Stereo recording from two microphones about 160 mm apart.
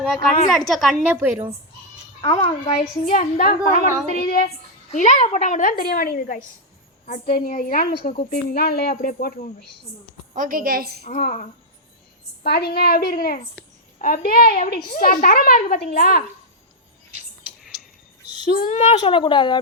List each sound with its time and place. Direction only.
0.7 s a woman's voice: 10° right (ahead or behind)
2.2 s a woman's voice: 35° left (ahead or behind); by 4.4 s 65° left (ahead or behind)
4.9 s a woman's voice: 50° left (ahead or behind)
10.3 s a woman's voice: 60° right (ahead or behind)
11.0 s a woman's voice: 55° left (ahead or behind)
12.4 s a child's voice: 80° left
14.9 s a child's voice: 60° left (ahead or behind)
18.4 s a woman's voice: 65° left (ahead or behind); by 18.9 s 50° left (ahead or behind)
19.0 s speech: 30° left (ahead or behind)